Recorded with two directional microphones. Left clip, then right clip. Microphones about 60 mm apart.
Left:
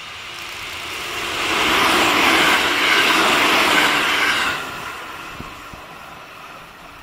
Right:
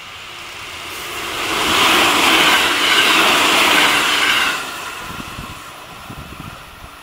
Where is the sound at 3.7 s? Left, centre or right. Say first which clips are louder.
Right 3 dB; right.